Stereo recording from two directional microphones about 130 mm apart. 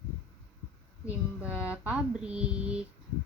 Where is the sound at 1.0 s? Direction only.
10° right (ahead or behind).